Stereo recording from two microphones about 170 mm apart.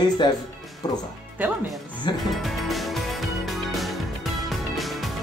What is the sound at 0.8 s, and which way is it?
Speech, 25° left (ahead or behind).